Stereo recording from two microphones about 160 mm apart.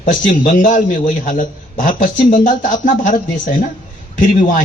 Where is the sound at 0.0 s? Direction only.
55° left (ahead or behind).